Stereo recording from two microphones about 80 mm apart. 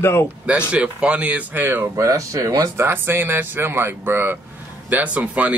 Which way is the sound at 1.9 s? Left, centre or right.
Right.